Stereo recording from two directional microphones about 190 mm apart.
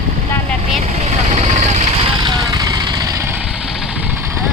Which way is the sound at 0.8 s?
35° right (ahead or behind).